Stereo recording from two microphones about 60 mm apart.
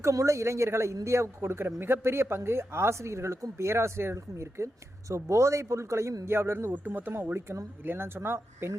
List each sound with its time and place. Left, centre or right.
0.0 s speech: right
6.7 s speech: right